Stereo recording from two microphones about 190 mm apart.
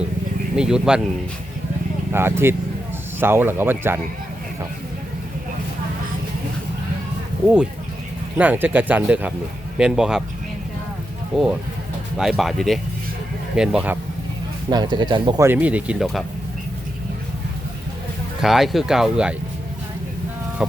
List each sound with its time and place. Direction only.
0.5 s speech: 5° right (ahead or behind)
2.1 s speech: 10° right (ahead or behind)
7.4 s speech: 5° right (ahead or behind)
11.3 s speech: centre (ahead or behind)
14.7 s speech: 20° right (ahead or behind)
15.4 s speech: 10° right (ahead or behind)
18.3 s speech: centre (ahead or behind)
20.6 s speech: 5° right (ahead or behind)